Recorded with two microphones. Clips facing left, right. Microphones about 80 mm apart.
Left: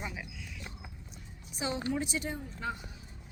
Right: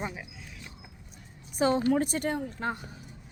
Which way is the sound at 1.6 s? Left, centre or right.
Right.